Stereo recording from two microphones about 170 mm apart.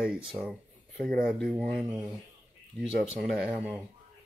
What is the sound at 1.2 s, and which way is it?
Speech, centre (ahead or behind).